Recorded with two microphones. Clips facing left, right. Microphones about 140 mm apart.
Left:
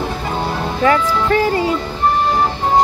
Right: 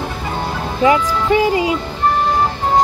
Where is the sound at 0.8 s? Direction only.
15° right (ahead or behind).